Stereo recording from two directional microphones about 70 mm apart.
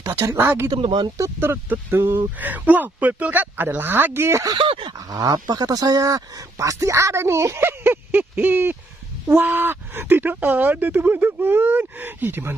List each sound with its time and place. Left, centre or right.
0.4 s speech: right
0.7 s speech: right
1.4 s speech: right
4.5 s dog: right
5.1 s speech: right